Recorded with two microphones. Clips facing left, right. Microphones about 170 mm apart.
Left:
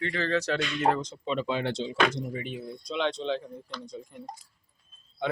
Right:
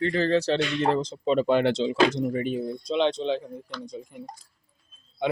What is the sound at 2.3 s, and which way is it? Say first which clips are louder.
Speech: right 8 dB; 40° right (ahead or behind).